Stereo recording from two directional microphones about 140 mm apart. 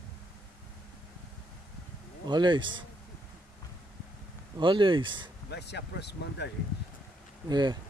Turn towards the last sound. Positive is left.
turn(degrees=-30)  # may be behind; listen again after turning